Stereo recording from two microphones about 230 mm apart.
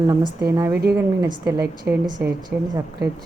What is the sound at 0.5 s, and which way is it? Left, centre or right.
A woman's voice, centre.